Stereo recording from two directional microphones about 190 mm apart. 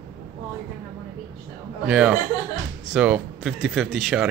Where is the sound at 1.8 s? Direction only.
5° right (ahead or behind).